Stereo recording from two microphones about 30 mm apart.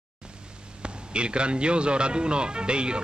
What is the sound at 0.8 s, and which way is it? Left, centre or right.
A man's voice, right.